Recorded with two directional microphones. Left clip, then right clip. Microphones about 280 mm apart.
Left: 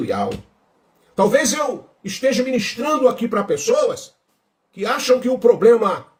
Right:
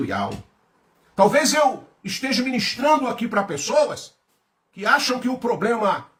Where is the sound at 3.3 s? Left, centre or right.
Centre.